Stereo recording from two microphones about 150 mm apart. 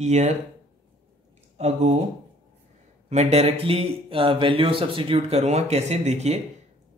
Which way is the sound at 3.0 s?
50° right (ahead or behind).